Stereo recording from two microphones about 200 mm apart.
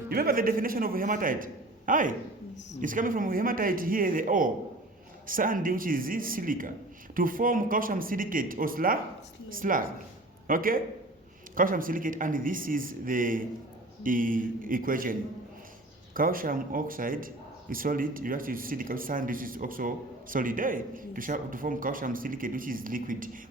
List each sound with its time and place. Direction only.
0.1 s a man's voice: 45° right (ahead or behind)
16.1 s a man's voice: 45° right (ahead or behind)